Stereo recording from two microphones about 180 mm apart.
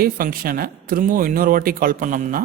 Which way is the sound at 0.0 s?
55° right (ahead or behind).